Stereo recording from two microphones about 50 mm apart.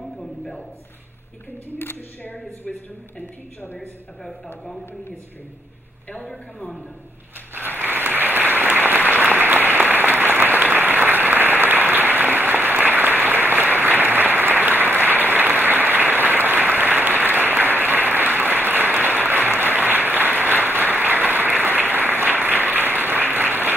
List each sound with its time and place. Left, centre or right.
1.8 s speech: left
3.7 s a woman's voice: centre
7.5 s applause: right